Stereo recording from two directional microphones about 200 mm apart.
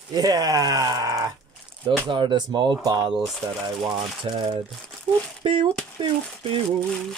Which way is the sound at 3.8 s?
25° right (ahead or behind).